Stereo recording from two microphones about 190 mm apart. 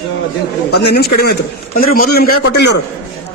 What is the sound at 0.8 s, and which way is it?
A man's voice, 55° left (ahead or behind).